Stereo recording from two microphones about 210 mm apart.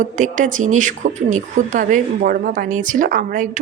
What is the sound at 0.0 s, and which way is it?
A woman's voice, 35° right (ahead or behind).